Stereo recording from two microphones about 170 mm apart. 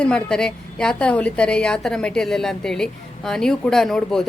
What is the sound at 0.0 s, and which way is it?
A woman's voice, 5° left (ahead or behind).